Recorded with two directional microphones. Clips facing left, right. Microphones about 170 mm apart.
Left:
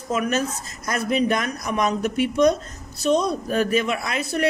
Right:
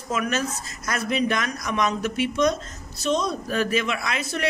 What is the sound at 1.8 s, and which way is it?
A man's voice, 40° left (ahead or behind).